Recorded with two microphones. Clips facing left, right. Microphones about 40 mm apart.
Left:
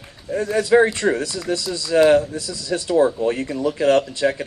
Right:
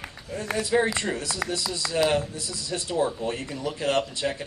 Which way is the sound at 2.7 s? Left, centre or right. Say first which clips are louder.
Left 9 dB; left.